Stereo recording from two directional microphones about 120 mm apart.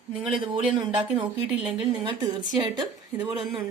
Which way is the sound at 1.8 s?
40° right (ahead or behind).